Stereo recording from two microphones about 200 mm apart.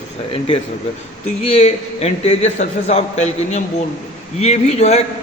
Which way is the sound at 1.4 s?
30° left (ahead or behind).